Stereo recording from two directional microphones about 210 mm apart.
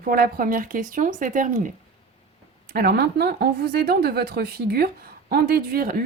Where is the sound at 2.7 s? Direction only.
45° right (ahead or behind).